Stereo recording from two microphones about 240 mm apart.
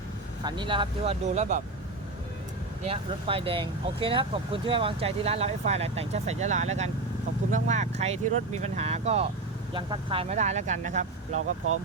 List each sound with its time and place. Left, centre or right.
0.4 s speech: centre
2.8 s speech: right
11.3 s speech: right